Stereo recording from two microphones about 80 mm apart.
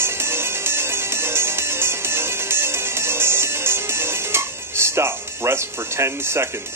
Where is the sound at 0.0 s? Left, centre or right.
Right.